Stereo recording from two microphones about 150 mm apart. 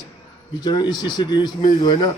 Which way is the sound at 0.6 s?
30° left (ahead or behind).